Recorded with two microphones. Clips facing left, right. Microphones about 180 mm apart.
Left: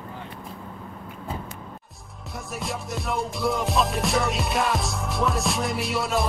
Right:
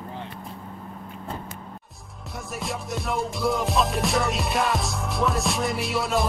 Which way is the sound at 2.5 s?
Centre (ahead or behind).